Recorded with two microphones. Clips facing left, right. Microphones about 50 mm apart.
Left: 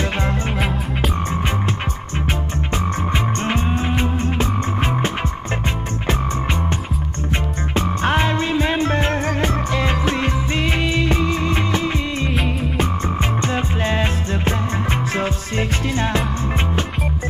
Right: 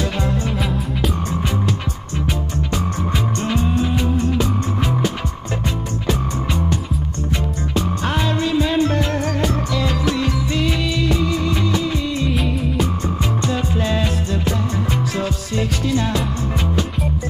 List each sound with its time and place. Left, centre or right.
2.7 s music: left
7.7 s music: left